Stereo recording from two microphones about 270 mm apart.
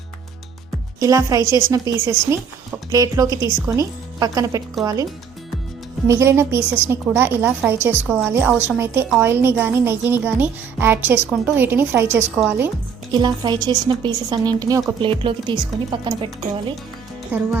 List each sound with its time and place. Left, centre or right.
0.9 s a woman's voice: centre
6.1 s a woman's voice: centre
17.3 s a woman's voice: centre